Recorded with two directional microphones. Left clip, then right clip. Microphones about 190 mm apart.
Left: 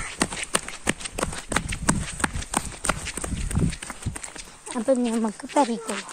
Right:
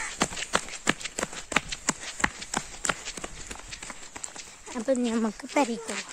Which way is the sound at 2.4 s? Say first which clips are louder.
Left 3 dB; 50° left (ahead or behind).